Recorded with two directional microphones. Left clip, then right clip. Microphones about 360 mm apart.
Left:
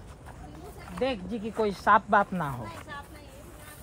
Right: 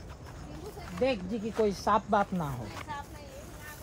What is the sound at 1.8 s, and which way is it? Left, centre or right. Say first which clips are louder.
Chopping: left 8 dB; left.